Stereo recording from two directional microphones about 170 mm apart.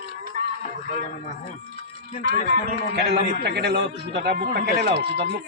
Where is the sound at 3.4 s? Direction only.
80° right.